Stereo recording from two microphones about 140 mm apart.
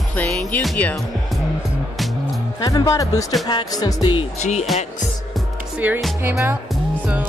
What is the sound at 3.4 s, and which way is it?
Music, 30° left (ahead or behind).